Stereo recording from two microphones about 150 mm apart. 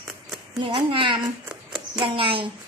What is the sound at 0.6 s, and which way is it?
Speech, 35° right (ahead or behind).